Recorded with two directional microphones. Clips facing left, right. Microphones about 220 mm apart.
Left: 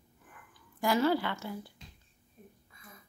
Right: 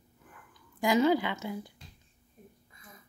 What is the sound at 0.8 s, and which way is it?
Speech, 15° right (ahead or behind).